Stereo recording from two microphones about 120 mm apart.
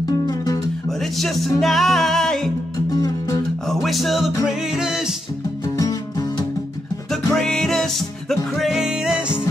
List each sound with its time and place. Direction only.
0.0 s music: 35° left (ahead or behind)
0.8 s music: centre (ahead or behind)
2.9 s music: 30° left (ahead or behind)
3.6 s music: centre (ahead or behind)
5.8 s music: 30° left (ahead or behind)
7.1 s music: 5° left (ahead or behind)